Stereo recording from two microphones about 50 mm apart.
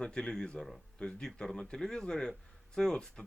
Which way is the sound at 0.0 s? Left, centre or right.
Centre.